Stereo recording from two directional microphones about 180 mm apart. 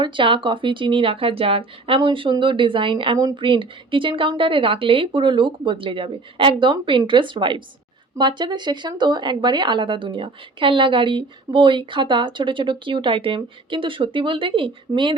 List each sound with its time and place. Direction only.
0.0 s speech: 25° right (ahead or behind)